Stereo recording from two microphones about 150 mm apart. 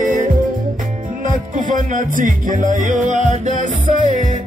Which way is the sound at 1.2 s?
60° right (ahead or behind).